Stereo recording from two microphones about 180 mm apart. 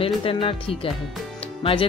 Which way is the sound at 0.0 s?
30° left (ahead or behind).